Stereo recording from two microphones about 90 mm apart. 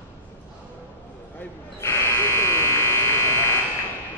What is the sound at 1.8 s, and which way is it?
Electric shaver, 30° left (ahead or behind).